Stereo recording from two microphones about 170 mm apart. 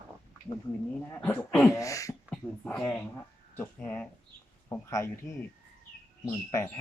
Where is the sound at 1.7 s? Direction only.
20° left (ahead or behind).